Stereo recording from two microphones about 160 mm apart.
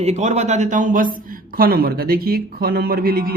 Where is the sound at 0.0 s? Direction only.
45° right (ahead or behind).